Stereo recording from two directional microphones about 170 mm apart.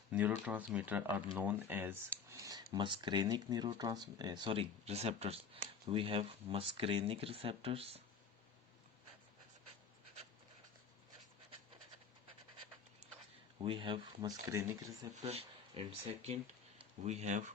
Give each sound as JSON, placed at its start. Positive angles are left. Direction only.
{"t": 0.1, "sound": "speech", "side_deg": -10}
{"t": 13.6, "sound": "speech", "side_deg": -30}
{"t": 15.1, "sound": "speech", "side_deg": -40}